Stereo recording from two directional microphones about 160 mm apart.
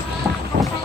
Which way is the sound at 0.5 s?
90° right.